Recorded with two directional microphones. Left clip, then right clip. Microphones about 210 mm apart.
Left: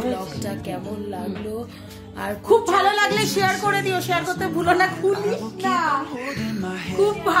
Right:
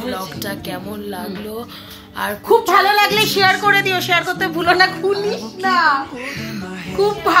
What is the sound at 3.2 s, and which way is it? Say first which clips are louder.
Music: right 7 dB; 5° right (ahead or behind).